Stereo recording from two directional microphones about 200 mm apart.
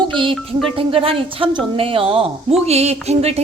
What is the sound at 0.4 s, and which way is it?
A woman's voice, 25° right (ahead or behind).